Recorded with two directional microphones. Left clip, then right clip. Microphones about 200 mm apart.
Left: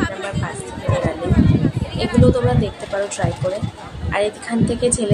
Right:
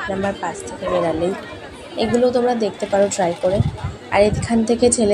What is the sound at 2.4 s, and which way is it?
A woman's voice, 5° right (ahead or behind).